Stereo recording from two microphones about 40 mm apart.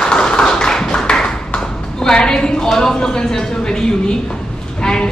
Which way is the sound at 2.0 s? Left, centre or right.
Centre.